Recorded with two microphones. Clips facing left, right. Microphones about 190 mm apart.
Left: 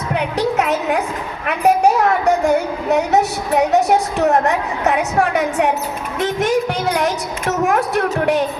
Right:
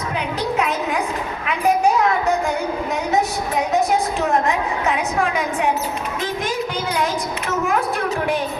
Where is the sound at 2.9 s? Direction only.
70° left (ahead or behind).